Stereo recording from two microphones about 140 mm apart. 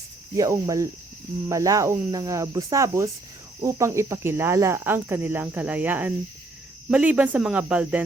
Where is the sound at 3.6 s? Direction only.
20° right (ahead or behind).